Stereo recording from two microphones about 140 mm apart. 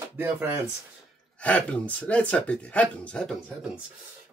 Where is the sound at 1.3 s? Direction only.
10° left (ahead or behind).